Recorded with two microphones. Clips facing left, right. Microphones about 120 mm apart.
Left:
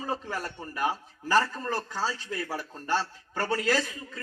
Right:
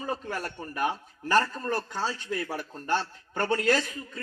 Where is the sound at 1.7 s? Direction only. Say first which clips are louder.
Right 1 dB; 20° right (ahead or behind).